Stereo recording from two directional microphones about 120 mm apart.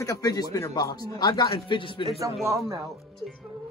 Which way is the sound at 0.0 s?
30° left (ahead or behind).